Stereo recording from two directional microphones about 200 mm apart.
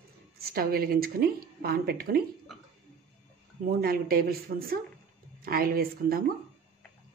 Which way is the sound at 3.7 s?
45° right (ahead or behind).